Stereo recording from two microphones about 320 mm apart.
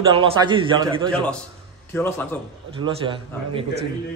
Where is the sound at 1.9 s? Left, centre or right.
Centre.